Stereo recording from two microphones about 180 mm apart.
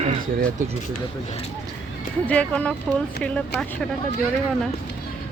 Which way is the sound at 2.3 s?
5° left (ahead or behind).